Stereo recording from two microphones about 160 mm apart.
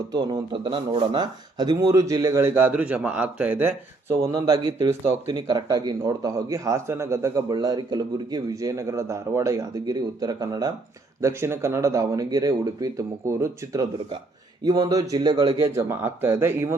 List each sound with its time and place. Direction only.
0.1 s speech: 25° right (ahead or behind)
15.7 s speech: 15° right (ahead or behind)